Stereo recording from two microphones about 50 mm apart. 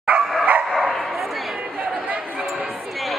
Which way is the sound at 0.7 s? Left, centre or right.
Centre.